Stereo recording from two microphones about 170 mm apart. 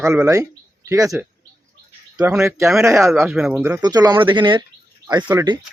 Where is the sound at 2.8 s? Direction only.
15° right (ahead or behind).